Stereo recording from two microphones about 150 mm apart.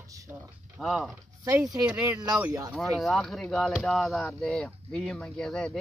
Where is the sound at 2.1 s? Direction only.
25° right (ahead or behind).